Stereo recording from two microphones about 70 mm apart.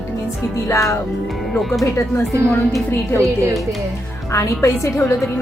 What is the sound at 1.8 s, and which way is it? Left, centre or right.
Speech, left.